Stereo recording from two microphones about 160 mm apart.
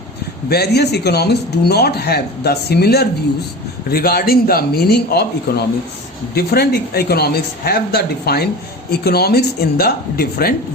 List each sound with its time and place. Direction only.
0.5 s speech: 90° left
3.8 s speech: 75° left (ahead or behind)